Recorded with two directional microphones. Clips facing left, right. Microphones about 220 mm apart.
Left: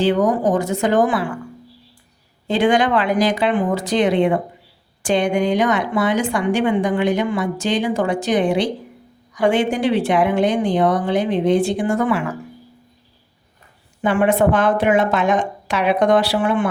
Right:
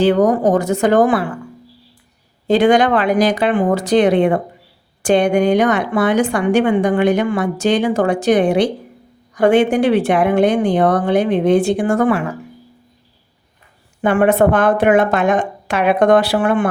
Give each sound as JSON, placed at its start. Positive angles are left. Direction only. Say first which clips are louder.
{"t": 0.2, "sound": "speech", "louder": "right 4 dB", "side_deg": -40}
{"t": 0.5, "sound": "a woman's voice", "louder": "right 4 dB", "side_deg": -55}
{"t": 2.5, "sound": "speech", "louder": "right 4 dB", "side_deg": -40}
{"t": 3.4, "sound": "a woman's voice", "louder": "right 3 dB", "side_deg": -55}
{"t": 14.0, "sound": "a woman's voice", "louder": "right 3 dB", "side_deg": -60}